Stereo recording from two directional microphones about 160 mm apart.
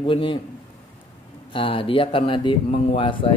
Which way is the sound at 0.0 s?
35° left (ahead or behind).